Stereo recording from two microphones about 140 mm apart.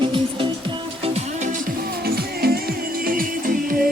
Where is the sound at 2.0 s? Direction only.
90° right.